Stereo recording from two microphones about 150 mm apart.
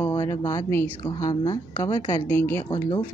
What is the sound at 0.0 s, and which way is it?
A woman's voice, 25° left (ahead or behind).